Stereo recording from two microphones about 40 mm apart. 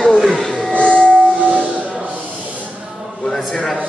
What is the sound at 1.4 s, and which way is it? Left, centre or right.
Hiss, right.